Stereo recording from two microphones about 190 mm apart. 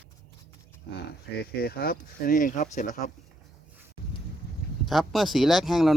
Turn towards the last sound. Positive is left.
turn(degrees=0)  # may be behind; listen again after turning